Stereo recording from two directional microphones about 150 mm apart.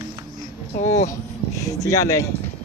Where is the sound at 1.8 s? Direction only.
20° left (ahead or behind).